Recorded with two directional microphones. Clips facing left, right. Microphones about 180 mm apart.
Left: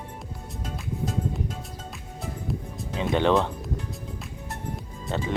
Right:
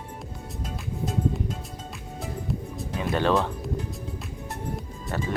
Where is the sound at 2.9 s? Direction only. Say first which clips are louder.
Left 2 dB; 20° left (ahead or behind).